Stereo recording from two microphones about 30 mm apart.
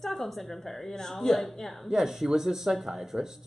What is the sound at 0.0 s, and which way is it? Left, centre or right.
A woman's voice, centre.